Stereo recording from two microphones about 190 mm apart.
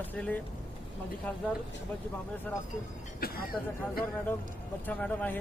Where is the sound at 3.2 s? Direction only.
50° left (ahead or behind).